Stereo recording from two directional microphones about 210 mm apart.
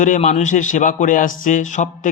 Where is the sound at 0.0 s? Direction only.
35° left (ahead or behind).